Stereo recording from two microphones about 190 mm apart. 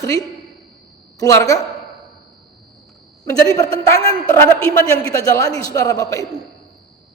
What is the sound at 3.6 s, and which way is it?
Speech, 30° right (ahead or behind).